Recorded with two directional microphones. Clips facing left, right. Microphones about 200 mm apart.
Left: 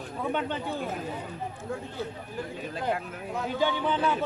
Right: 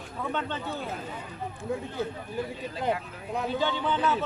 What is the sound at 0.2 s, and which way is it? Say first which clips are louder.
Speech: left 2 dB; 15° left (ahead or behind).